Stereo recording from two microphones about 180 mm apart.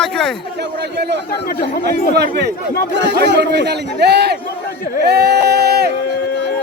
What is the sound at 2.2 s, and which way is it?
A man's voice, 65° right (ahead or behind).